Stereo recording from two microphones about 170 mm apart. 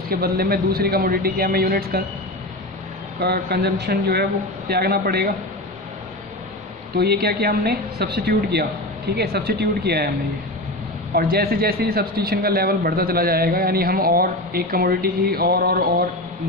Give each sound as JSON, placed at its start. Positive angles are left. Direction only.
{"t": 0.1, "sound": "speech", "side_deg": -65}
{"t": 3.2, "sound": "a woman's voice", "side_deg": -65}
{"t": 7.0, "sound": "a woman's voice", "side_deg": -70}
{"t": 11.1, "sound": "speech", "side_deg": -60}